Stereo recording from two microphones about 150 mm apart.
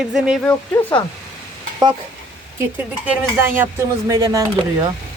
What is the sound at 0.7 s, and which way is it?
Speech, 20° left (ahead or behind).